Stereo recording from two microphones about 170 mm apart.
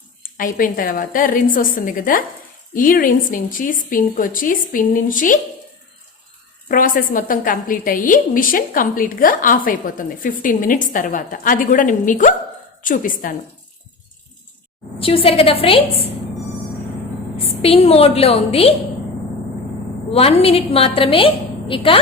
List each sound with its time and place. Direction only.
0.2 s a woman's voice: 55° left (ahead or behind)
6.7 s a woman's voice: 55° left (ahead or behind)
14.9 s a woman's voice: 35° left (ahead or behind)
17.6 s a woman's voice: 35° left (ahead or behind)
20.1 s a woman's voice: 35° left (ahead or behind)